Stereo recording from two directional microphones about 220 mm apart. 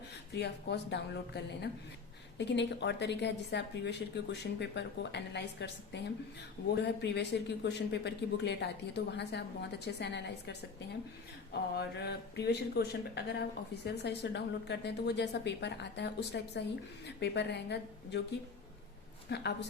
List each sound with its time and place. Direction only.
0.3 s speech: 50° left (ahead or behind)
11.8 s speech: 50° left (ahead or behind)